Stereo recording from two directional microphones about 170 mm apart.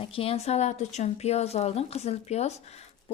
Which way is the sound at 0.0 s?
35° left (ahead or behind).